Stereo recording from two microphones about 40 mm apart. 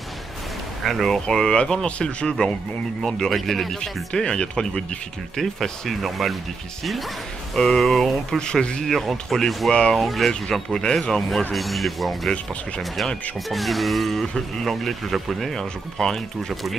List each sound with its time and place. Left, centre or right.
0.8 s speech: centre
1.2 s speech: centre
1.9 s speech: left
3.2 s speech: centre
4.1 s speech: left
5.3 s speech: centre
7.5 s speech: centre
8.4 s speech: centre
8.8 s speech: centre
9.7 s speech: centre
9.9 s speech: centre
13.5 s speech: centre
14.2 s speech: centre
14.7 s speech: centre